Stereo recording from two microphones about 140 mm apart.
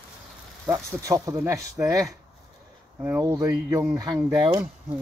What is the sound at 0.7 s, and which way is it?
Speech, 25° right (ahead or behind).